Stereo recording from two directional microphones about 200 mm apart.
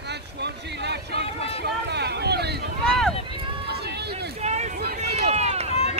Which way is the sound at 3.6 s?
55° right (ahead or behind).